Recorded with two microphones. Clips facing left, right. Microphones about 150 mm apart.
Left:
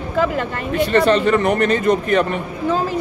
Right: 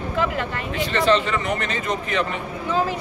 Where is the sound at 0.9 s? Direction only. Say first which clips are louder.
Left 5 dB; 55° left (ahead or behind).